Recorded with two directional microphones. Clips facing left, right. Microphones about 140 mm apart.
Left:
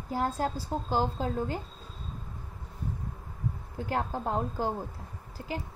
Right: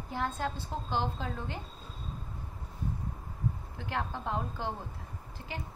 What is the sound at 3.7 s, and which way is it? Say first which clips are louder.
Speech: left 8 dB; 40° left (ahead or behind).